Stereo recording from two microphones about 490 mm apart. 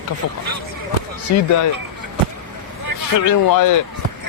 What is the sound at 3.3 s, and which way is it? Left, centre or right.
Speech, left.